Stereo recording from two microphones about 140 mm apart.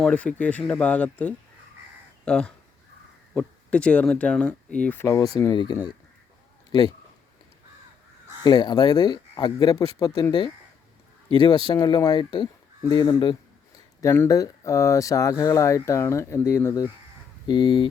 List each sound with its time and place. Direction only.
0.0 s speech: 5° left (ahead or behind); by 6.9 s 30° left (ahead or behind)
8.4 s speech: 30° left (ahead or behind)
11.3 s speech: 30° left (ahead or behind)
14.0 s speech: 20° left (ahead or behind)
17.4 s speech: 30° left (ahead or behind)